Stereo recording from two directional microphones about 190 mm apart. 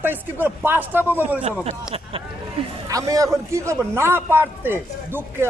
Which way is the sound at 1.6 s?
30° right (ahead or behind).